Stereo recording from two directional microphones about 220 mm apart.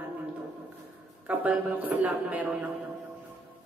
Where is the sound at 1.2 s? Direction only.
5° right (ahead or behind).